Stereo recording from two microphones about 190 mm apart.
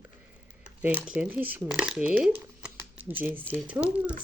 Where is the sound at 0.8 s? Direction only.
10° right (ahead or behind).